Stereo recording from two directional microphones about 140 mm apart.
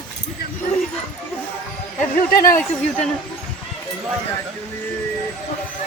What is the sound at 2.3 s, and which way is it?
Speech, 90° left.